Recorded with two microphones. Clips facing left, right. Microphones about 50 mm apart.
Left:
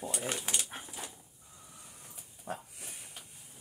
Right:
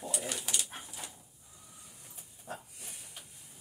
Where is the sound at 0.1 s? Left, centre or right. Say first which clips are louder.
Even; left.